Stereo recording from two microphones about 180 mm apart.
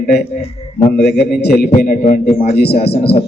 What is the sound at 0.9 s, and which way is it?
Speech, 65° left (ahead or behind).